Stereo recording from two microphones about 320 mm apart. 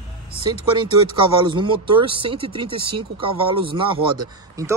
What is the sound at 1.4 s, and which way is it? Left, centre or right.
Speech, centre.